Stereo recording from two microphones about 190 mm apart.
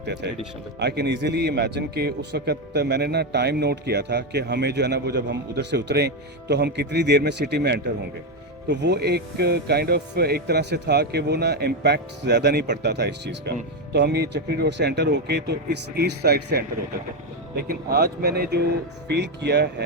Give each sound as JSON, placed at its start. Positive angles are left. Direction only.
{"t": 0.0, "sound": "a man's voice", "side_deg": -65}